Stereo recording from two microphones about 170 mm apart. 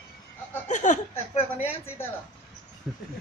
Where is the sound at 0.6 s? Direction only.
45° left (ahead or behind).